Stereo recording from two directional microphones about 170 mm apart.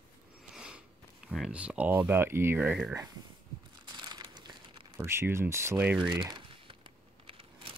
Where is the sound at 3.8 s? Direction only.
25° right (ahead or behind).